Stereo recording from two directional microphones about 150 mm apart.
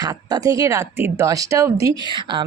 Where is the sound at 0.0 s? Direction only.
25° right (ahead or behind).